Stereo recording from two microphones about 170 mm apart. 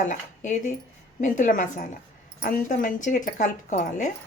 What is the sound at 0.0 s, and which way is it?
Speech, 45° left (ahead or behind).